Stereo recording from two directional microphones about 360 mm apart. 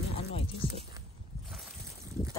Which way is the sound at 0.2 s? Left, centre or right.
Centre.